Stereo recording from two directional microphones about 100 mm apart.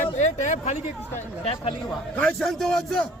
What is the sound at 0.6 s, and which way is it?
Speech, 90° left.